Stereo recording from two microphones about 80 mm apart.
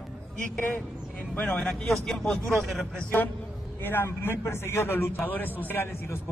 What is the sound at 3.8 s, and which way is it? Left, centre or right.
A man's voice, left.